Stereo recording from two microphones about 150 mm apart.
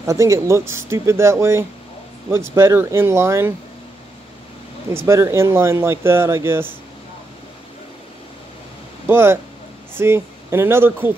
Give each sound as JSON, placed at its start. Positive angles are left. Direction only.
{"t": 0.0, "sound": "speech", "side_deg": -20}
{"t": 4.8, "sound": "speech", "side_deg": -20}
{"t": 9.0, "sound": "speech", "side_deg": -15}